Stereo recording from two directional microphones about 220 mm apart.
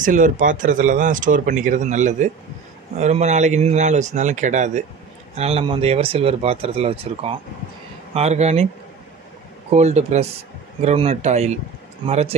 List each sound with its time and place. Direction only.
0.0 s speech: 35° right (ahead or behind)
9.8 s speech: 30° right (ahead or behind)